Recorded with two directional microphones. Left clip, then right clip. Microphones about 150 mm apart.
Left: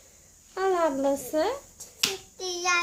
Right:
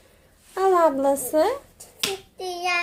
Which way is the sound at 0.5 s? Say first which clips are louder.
Right 6 dB; 25° right (ahead or behind).